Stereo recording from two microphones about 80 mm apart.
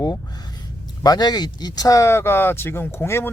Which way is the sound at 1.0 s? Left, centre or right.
Left.